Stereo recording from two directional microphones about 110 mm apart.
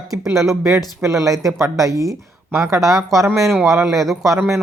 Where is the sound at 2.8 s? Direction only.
5° right (ahead or behind).